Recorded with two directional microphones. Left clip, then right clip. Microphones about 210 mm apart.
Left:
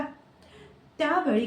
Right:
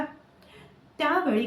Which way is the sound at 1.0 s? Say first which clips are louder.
Right 1 dB; 15° right (ahead or behind).